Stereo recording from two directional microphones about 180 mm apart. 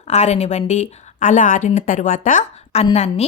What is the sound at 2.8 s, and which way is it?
Speech, 35° left (ahead or behind).